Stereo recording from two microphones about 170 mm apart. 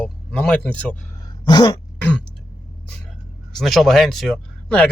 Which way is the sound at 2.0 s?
5° left (ahead or behind).